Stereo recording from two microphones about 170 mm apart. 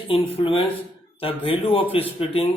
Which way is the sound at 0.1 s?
30° left (ahead or behind).